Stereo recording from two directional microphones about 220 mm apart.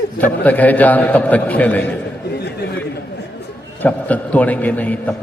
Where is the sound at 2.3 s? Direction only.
50° left (ahead or behind).